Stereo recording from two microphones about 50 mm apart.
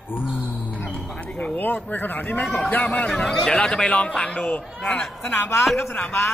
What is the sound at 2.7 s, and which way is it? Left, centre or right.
Speech, left.